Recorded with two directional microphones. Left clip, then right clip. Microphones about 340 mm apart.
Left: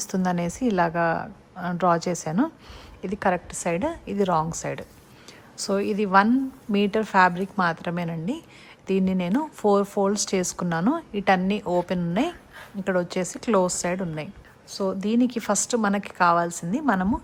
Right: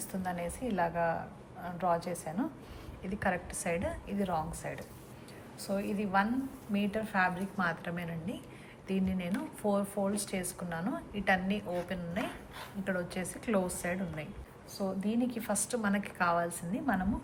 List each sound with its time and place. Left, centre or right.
0.0 s a woman's voice: centre